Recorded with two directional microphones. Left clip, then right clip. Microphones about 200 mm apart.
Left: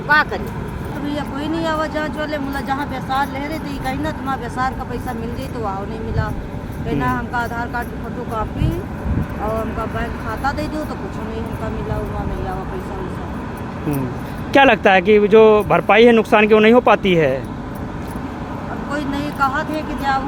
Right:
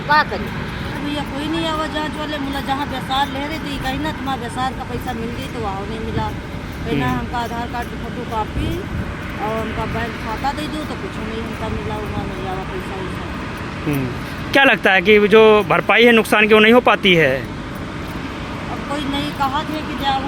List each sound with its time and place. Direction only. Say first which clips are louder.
1.6 s speech: left 3 dB; 5° right (ahead or behind)
7.0 s speech: left 3 dB; 5° right (ahead or behind)
14.5 s speech: left 1 dB; 5° left (ahead or behind)
19.4 s speech: left 4 dB; centre (ahead or behind)